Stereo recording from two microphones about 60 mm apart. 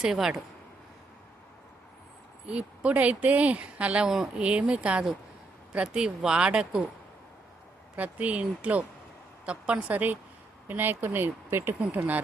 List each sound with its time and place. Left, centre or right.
0.0 s speech: centre
2.5 s speech: right
7.9 s speech: right